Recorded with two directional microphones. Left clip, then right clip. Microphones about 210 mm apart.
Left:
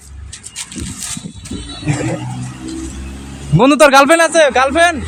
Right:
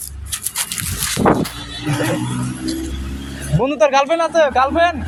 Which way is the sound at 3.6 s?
35° left (ahead or behind).